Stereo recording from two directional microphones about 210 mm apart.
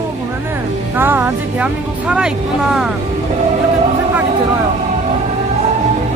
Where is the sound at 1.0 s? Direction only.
10° right (ahead or behind).